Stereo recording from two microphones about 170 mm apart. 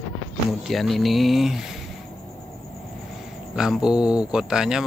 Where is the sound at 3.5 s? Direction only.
5° right (ahead or behind).